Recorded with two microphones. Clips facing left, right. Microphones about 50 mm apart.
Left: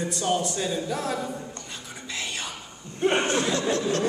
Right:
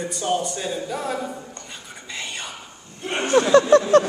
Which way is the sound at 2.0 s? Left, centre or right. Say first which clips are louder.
Right 1 dB; centre.